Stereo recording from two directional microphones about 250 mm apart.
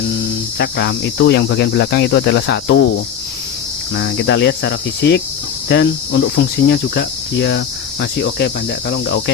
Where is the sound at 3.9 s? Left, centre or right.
Left.